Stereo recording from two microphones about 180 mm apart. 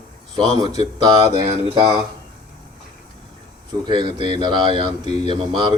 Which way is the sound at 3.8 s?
25° right (ahead or behind).